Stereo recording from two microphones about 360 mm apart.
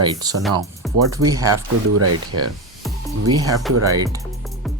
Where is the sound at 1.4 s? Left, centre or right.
Right.